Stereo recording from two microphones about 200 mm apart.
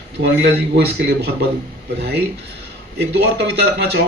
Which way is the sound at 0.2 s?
60° right (ahead or behind).